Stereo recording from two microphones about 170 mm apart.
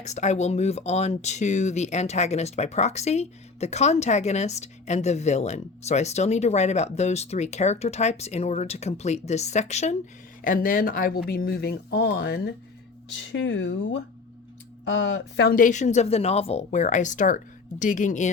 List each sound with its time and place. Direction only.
0.0 s speech: 40° left (ahead or behind)
10.4 s speech: 55° left (ahead or behind); by 12.4 s 70° left (ahead or behind)
13.3 s speech: 90° left
15.0 s speech: 85° left
15.5 s speech: 50° left (ahead or behind)